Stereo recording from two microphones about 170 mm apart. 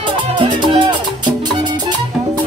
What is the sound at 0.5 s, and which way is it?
Music, 25° right (ahead or behind).